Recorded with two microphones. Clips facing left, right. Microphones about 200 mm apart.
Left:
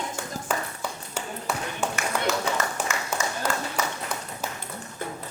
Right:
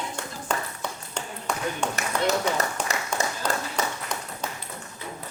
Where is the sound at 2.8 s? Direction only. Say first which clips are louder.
Even; 5° left (ahead or behind).